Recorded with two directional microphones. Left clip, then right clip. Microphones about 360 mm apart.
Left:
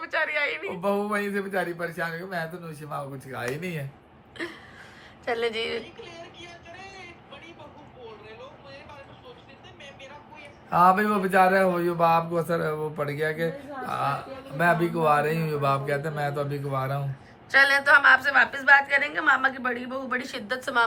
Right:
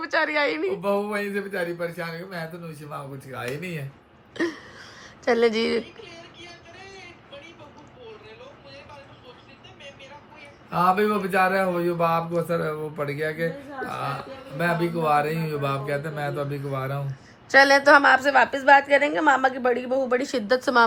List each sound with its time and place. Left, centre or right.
0.1 s a woman's voice: centre
0.8 s speech: centre
5.2 s a woman's voice: centre
5.8 s a sound: centre
10.7 s speech: centre
17.5 s a woman's voice: centre